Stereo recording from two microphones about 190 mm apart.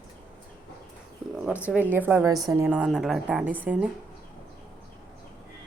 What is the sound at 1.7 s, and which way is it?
Speech, 10° right (ahead or behind).